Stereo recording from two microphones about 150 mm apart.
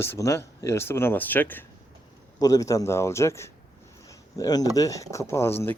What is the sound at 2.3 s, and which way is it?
Speech, 25° left (ahead or behind).